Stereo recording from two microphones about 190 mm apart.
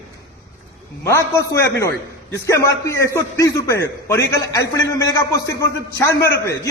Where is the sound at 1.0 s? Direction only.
15° left (ahead or behind).